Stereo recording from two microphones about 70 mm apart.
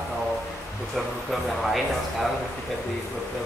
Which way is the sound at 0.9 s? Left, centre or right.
Centre.